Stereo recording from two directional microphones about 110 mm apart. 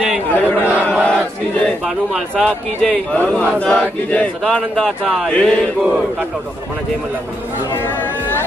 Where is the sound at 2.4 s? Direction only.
Centre (ahead or behind).